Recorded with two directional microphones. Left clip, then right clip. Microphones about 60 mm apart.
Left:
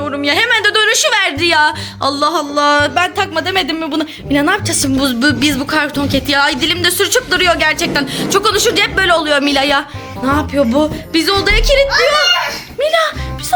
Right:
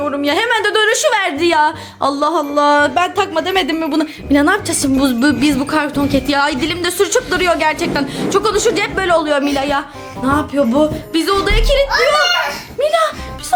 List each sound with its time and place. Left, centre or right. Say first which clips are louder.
0.2 s a woman's voice: left 4 dB; right
3.5 s a woman's voice: even; right
4.8 s a woman's voice: left 1 dB; right; by 9.4 s centre
9.4 s a woman's voice: left 4 dB; left
12.8 s a woman's voice: left 1 dB; right